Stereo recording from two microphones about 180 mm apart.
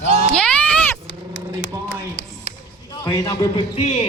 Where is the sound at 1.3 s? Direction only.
75° left (ahead or behind).